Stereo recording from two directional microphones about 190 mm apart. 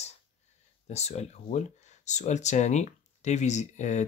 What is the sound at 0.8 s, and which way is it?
Speech, 35° left (ahead or behind).